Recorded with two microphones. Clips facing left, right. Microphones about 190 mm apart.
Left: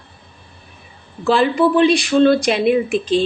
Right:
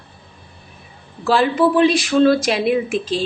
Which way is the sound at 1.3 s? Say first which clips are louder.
Left 1 dB; centre (ahead or behind).